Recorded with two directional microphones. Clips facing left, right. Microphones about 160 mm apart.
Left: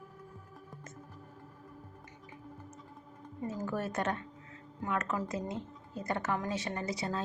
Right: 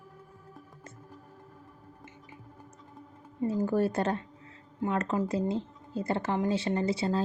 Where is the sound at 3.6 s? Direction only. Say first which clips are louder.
Right 5 dB; 30° right (ahead or behind).